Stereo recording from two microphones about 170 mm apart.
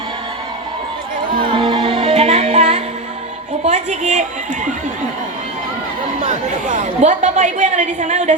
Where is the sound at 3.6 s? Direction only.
45° right (ahead or behind).